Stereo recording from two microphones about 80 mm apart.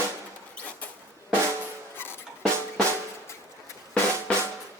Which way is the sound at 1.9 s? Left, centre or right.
Left.